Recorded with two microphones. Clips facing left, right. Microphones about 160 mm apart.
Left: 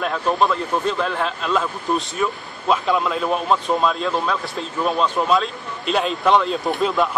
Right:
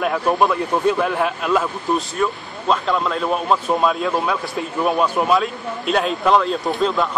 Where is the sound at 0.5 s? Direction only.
10° right (ahead or behind).